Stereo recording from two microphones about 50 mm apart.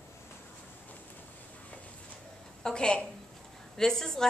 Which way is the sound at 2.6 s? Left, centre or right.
Centre.